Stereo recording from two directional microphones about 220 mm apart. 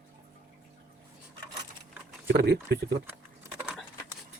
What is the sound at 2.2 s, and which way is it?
Speech, 50° right (ahead or behind).